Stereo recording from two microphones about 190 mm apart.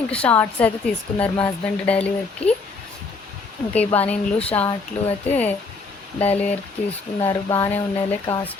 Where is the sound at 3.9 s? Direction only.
5° left (ahead or behind).